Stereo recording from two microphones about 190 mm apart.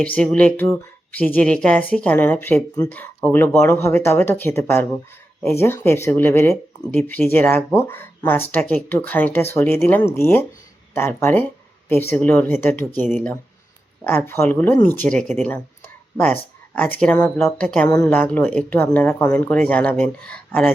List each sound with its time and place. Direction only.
0.0 s speech: 5° left (ahead or behind)
14.0 s speech: 10° left (ahead or behind)
17.8 s speech: 20° left (ahead or behind)